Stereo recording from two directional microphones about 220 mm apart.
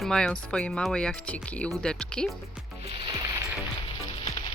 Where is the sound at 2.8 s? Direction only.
25° right (ahead or behind).